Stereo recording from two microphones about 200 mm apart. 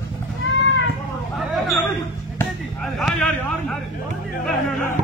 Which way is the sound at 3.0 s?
Centre (ahead or behind).